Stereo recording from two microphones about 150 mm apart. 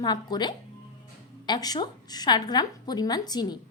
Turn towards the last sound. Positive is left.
turn(degrees=25)  # may be behind; listen again after turning